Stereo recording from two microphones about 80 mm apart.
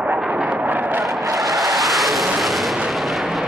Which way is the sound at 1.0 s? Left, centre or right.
Centre.